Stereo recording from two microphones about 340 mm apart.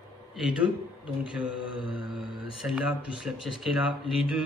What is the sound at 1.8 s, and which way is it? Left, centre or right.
Speech, centre.